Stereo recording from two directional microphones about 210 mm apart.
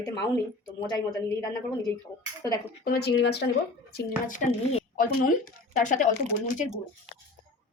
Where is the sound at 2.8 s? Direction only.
50° left (ahead or behind).